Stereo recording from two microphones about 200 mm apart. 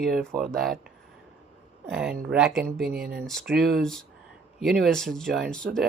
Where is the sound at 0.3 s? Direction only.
Centre (ahead or behind).